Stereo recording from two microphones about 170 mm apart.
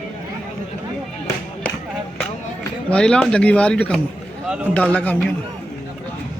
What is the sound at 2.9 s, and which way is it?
Speech, 5° left (ahead or behind).